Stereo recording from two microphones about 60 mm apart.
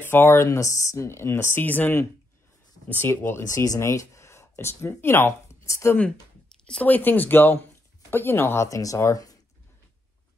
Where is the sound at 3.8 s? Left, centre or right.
Left.